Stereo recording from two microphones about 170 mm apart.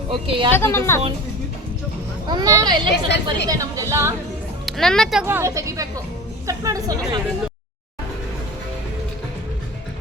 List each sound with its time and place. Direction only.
0.1 s a woman's voice: 30° right (ahead or behind)
0.5 s a woman's voice: 15° left (ahead or behind)
2.2 s a woman's voice: 25° right (ahead or behind)
4.6 s speech: 5° left (ahead or behind)
5.2 s a woman's voice: 15° right (ahead or behind)